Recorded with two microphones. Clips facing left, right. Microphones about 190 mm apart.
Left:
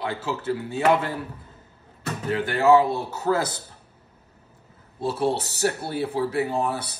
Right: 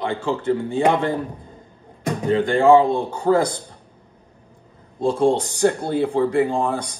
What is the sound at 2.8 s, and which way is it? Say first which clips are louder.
Speech: right 5 dB; 5° left (ahead or behind).